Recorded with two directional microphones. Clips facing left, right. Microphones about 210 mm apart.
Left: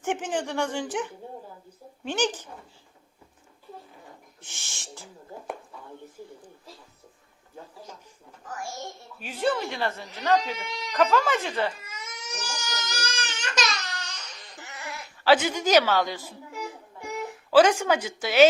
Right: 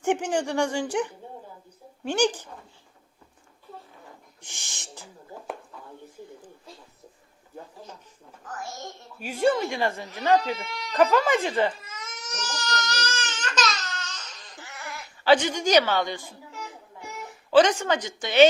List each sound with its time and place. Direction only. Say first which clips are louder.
0.0 s speech: right 4 dB; 15° right (ahead or behind)
4.4 s speech: even; 15° right (ahead or behind)
9.2 s speech: right 4 dB; 10° right (ahead or behind)
10.5 s a woman's voice: right 2 dB; 15° left (ahead or behind)
10.9 s speech: right 2 dB; 15° right (ahead or behind)
11.9 s crying: even; 10° left (ahead or behind)
15.2 s a woman's voice: right 1 dB; 5° left (ahead or behind)